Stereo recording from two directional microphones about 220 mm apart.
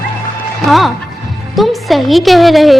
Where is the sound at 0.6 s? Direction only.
Centre (ahead or behind).